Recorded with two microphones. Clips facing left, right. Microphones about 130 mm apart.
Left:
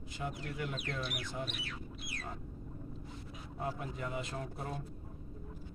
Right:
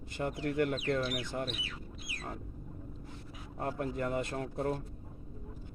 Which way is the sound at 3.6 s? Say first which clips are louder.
Right 5 dB; 60° right (ahead or behind).